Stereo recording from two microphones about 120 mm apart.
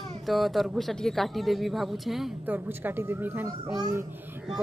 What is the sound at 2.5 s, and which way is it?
Speech, 15° right (ahead or behind).